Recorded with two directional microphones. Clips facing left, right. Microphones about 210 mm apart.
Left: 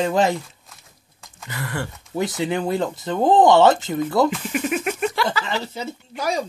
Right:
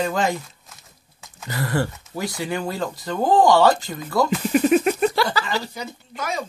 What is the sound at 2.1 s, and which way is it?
Speech, 20° left (ahead or behind).